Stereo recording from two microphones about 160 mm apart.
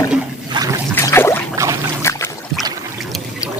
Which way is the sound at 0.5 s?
30° right (ahead or behind).